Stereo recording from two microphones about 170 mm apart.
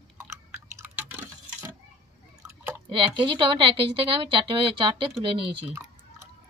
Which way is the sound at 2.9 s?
30° right (ahead or behind).